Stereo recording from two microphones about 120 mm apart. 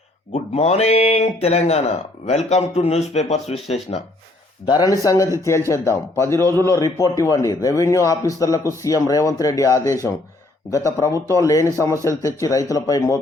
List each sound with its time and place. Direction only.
0.3 s speech: 65° left (ahead or behind)
4.7 s speech: 30° left (ahead or behind)